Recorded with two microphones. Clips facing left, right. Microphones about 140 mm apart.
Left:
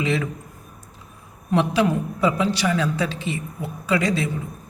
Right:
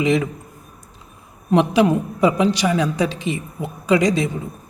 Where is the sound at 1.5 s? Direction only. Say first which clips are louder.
Right 4 dB; 15° right (ahead or behind).